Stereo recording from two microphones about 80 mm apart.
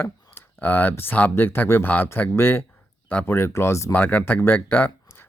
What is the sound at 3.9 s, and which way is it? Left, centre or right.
Speech, left.